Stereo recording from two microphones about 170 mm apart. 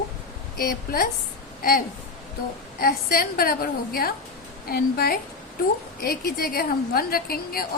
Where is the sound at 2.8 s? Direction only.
60° left (ahead or behind).